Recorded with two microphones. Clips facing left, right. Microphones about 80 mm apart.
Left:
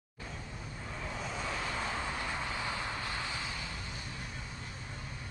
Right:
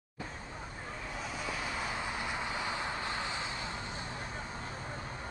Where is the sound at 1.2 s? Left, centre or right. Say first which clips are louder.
Even; centre; by 3.7 s right.